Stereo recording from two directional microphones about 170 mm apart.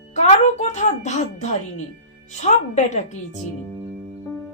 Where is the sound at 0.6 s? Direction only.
40° left (ahead or behind).